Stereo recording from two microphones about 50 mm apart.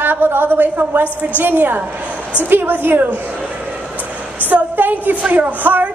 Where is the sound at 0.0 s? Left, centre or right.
Right.